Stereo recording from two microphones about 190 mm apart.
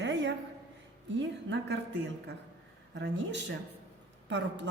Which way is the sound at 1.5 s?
65° right (ahead or behind).